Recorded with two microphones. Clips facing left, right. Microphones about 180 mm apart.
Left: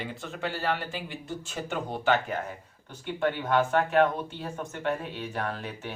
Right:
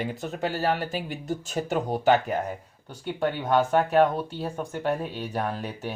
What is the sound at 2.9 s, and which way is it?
Speech, 15° right (ahead or behind).